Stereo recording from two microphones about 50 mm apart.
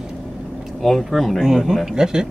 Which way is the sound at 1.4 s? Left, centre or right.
Centre.